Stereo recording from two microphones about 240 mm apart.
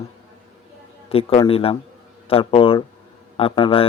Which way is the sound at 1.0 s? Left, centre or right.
Left.